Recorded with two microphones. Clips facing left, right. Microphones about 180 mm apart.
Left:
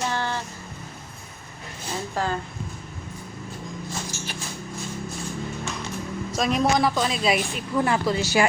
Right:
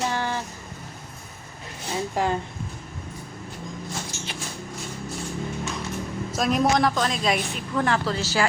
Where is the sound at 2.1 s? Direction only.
15° right (ahead or behind).